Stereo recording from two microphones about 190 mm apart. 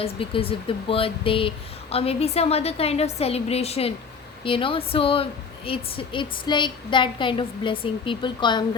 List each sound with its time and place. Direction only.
0.0 s a woman's voice: 30° left (ahead or behind)